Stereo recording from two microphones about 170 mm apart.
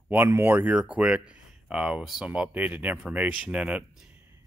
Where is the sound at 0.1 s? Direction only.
15° right (ahead or behind).